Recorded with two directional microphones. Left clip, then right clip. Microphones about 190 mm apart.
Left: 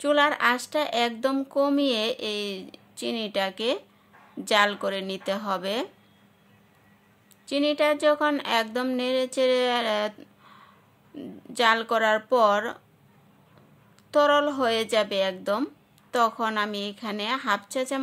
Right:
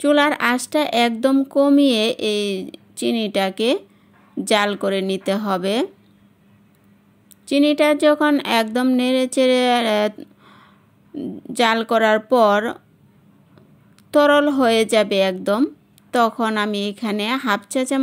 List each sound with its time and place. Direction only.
0.0 s speech: 30° right (ahead or behind)
7.4 s speech: 30° right (ahead or behind)
14.1 s speech: 30° right (ahead or behind)